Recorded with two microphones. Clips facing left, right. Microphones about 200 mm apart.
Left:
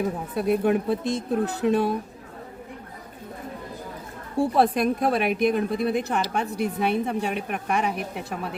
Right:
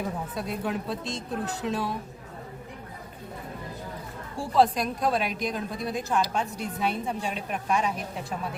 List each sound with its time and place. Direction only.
0.3 s a woman's voice: 60° left (ahead or behind)
4.4 s a woman's voice: 60° left (ahead or behind)